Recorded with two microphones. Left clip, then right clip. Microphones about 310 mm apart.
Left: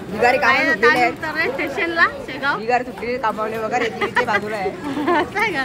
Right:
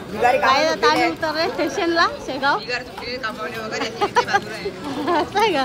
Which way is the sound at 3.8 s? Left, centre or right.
Centre.